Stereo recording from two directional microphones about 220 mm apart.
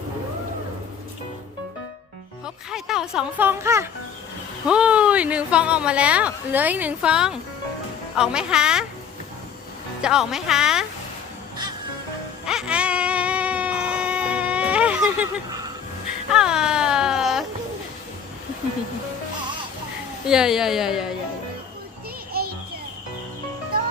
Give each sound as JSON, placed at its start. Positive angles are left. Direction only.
{"t": 2.6, "sound": "a woman's voice", "side_deg": 0}
{"t": 10.0, "sound": "a woman's voice", "side_deg": -5}
{"t": 12.5, "sound": "a sound", "side_deg": -5}
{"t": 20.2, "sound": "a woman's voice", "side_deg": -5}
{"t": 22.3, "sound": "music", "side_deg": -45}